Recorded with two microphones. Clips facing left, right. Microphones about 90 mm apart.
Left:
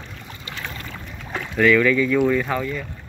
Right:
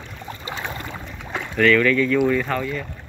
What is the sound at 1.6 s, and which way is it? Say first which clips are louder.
Speech: even; 10° left (ahead or behind).